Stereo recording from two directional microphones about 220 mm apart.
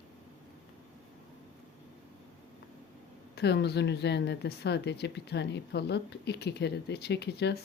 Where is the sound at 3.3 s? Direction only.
50° left (ahead or behind).